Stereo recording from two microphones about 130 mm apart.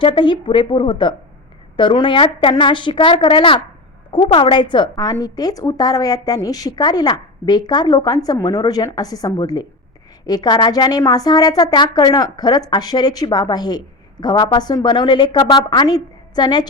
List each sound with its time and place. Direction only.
0.0 s a woman's voice: 40° left (ahead or behind)